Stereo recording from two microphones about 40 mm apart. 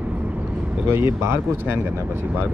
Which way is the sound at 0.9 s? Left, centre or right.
Right.